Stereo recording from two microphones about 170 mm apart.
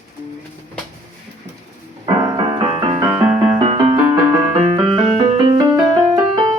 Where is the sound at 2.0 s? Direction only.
30° right (ahead or behind).